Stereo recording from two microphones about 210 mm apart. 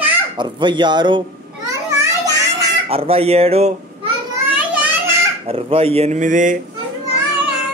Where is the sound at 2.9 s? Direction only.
30° right (ahead or behind).